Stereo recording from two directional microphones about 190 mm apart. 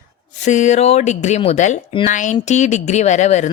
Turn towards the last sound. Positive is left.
turn(degrees=40)  # may be behind; listen again after turning